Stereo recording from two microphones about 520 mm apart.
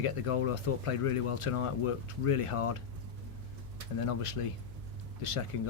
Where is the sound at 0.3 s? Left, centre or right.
Left.